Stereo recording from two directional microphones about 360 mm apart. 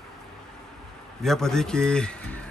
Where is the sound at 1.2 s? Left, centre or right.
Centre.